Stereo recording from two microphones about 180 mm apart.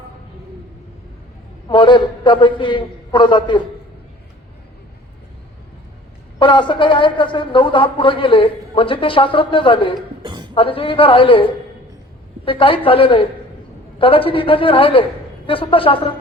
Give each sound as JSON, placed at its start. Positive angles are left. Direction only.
{"t": 1.6, "sound": "a man's voice", "side_deg": 25}
{"t": 6.4, "sound": "a man's voice", "side_deg": 25}
{"t": 10.2, "sound": "a sound", "side_deg": -25}
{"t": 10.5, "sound": "a man's voice", "side_deg": 30}